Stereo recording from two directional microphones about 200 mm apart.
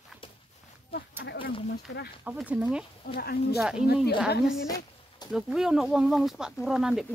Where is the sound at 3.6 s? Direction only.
5° right (ahead or behind).